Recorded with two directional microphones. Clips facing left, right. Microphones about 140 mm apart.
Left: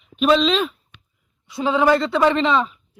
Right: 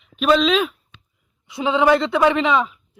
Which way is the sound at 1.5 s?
20° right (ahead or behind).